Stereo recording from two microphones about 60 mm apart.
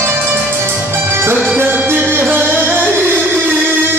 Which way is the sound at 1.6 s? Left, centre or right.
Right.